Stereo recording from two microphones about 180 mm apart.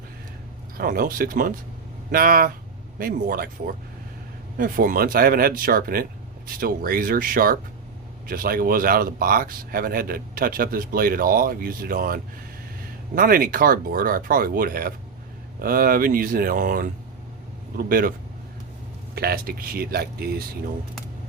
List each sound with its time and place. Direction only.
0.8 s speech: 55° right (ahead or behind)
4.5 s speech: 50° right (ahead or behind)
19.1 s speech: 60° right (ahead or behind)